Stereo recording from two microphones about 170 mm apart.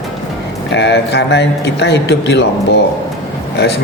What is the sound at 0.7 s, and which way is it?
Speech, 90° left.